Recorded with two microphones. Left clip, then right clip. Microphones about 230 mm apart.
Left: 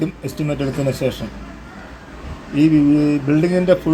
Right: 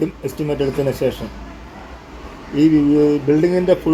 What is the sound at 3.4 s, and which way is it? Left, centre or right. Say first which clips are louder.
Speech: even; left.